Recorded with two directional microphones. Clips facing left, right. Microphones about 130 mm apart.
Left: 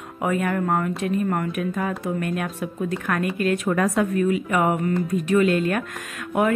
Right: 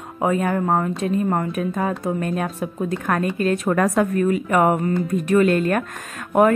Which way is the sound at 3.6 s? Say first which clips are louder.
Right 3 dB; 45° right (ahead or behind).